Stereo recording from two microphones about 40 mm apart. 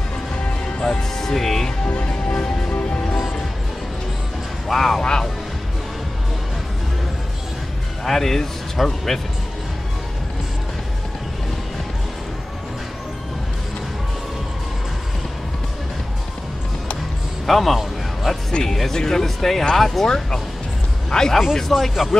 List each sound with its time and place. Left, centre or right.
1.1 s speech: centre
1.9 s music: left
4.6 s speech: centre
5.0 s speech: centre
8.0 s speech: centre
17.5 s speech: centre
18.5 s speech: centre
21.1 s a man's voice: centre
21.7 s speech: centre